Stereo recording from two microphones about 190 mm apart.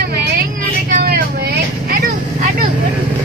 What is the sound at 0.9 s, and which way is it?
Vehicle, 50° right (ahead or behind).